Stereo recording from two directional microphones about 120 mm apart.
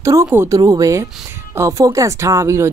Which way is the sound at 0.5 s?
30° right (ahead or behind).